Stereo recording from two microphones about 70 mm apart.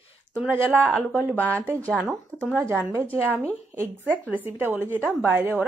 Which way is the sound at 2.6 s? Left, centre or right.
Right.